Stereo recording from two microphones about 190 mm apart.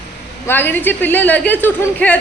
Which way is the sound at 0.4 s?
10° left (ahead or behind).